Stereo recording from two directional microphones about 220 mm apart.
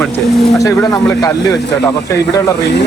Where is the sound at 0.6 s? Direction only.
15° left (ahead or behind).